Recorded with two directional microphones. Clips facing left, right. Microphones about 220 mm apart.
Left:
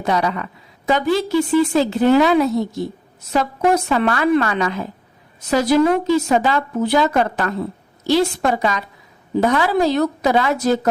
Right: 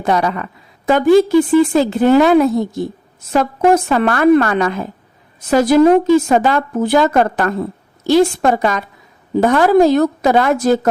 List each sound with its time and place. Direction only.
0.0 s a woman's voice: 50° right (ahead or behind)